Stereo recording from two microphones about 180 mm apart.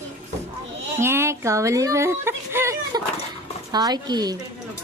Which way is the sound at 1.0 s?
15° right (ahead or behind).